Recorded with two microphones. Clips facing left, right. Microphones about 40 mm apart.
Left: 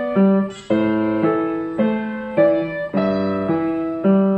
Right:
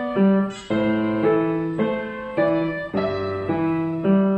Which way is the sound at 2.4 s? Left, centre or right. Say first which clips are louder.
Left 5 dB; centre.